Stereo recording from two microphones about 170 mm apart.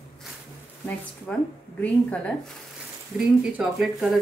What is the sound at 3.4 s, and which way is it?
Speech, 5° right (ahead or behind).